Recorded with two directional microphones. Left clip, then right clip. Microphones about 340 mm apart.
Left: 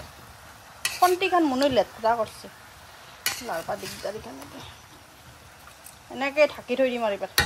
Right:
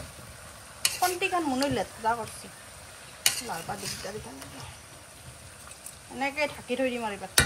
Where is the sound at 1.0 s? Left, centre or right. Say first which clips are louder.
Left 8 dB; left.